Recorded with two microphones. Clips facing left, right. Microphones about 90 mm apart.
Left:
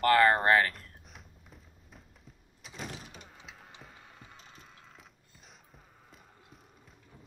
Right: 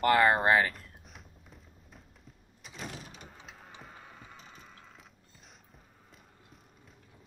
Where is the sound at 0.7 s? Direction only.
Centre (ahead or behind).